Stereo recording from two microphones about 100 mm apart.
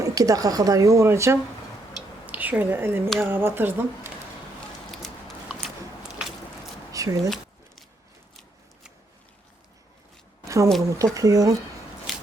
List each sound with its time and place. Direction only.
0.0 s speech: 35° right (ahead or behind)
2.2 s a woman's voice: 15° right (ahead or behind)
5.6 s biting: 5° right (ahead or behind)
6.9 s a sound: 35° right (ahead or behind)
10.4 s a sound: 30° right (ahead or behind)
10.8 s speech: 30° right (ahead or behind)
12.1 s scissors: centre (ahead or behind)